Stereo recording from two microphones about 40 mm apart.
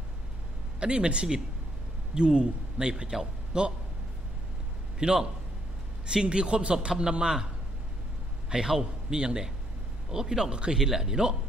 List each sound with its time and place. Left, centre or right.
0.7 s a man's voice: right
4.9 s a man's voice: centre
8.5 s speech: right